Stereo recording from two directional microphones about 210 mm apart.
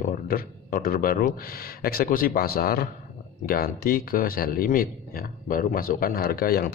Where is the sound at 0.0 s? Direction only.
40° left (ahead or behind).